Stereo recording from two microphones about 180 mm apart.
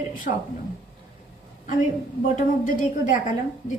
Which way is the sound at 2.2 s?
45° left (ahead or behind).